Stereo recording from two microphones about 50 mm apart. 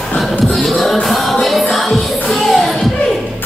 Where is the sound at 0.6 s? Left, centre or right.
Centre.